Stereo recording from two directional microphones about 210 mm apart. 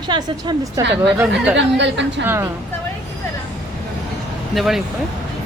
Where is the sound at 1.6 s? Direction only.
55° right (ahead or behind).